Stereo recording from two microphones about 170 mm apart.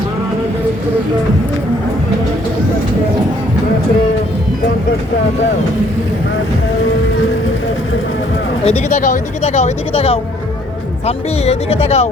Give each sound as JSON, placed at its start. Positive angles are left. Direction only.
{"t": 8.6, "sound": "speech", "side_deg": 40}